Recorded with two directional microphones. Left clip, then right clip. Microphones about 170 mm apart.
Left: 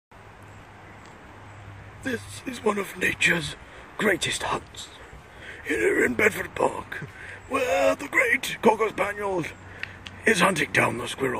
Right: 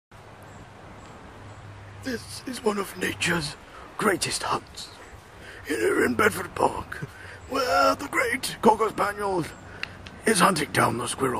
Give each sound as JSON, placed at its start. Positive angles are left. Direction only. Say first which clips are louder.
{"t": 2.1, "sound": "speech", "louder": "left 1 dB", "side_deg": -65}
{"t": 2.6, "sound": "speech", "louder": "left 2 dB", "side_deg": 0}
{"t": 5.7, "sound": "speech", "louder": "left 1 dB", "side_deg": 0}